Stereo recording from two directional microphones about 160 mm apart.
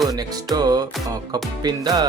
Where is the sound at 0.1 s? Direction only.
25° right (ahead or behind).